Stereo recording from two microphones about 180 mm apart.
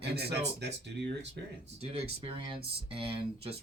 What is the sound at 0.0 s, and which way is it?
Speech, 65° right (ahead or behind).